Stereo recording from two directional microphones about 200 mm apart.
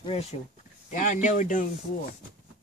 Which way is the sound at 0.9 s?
40° left (ahead or behind).